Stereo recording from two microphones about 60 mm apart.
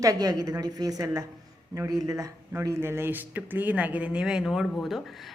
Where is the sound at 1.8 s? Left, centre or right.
Right.